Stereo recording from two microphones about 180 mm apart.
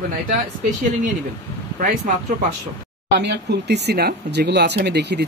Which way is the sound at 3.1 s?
70° right (ahead or behind).